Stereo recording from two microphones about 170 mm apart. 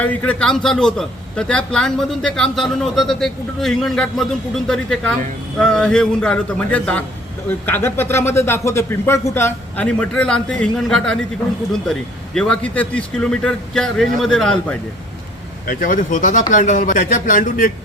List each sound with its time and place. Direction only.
0.0 s a man's voice: 10° left (ahead or behind)
15.6 s speech: 55° left (ahead or behind)